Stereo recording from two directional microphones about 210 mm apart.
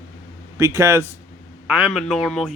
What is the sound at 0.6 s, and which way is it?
A man's voice, 15° right (ahead or behind).